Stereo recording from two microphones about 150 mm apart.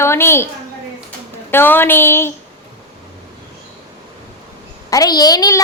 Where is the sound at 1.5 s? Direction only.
15° left (ahead or behind).